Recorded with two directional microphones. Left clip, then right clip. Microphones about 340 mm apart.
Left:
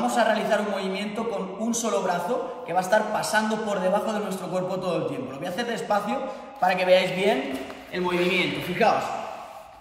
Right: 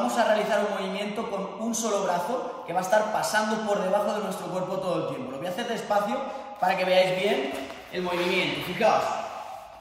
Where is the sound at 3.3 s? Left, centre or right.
Centre.